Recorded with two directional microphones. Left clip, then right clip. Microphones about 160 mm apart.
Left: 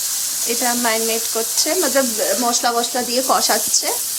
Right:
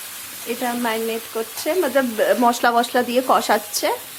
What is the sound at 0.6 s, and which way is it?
Speech, centre (ahead or behind).